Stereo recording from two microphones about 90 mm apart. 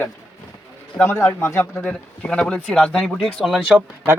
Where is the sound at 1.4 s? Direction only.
30° left (ahead or behind).